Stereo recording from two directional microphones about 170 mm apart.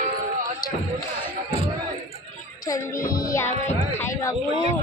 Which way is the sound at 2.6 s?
20° left (ahead or behind).